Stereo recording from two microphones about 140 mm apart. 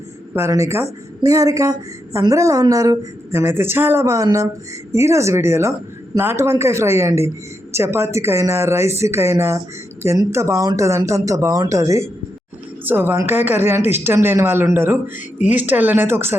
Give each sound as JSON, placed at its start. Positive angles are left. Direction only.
{"t": 0.3, "sound": "speech", "side_deg": -20}